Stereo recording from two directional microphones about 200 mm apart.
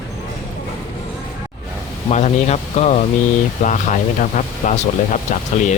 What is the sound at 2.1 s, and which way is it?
Speech, 35° left (ahead or behind).